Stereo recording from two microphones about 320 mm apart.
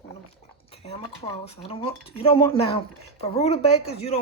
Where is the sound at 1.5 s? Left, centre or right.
Centre.